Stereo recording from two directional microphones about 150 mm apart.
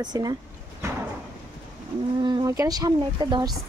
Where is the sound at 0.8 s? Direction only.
20° right (ahead or behind).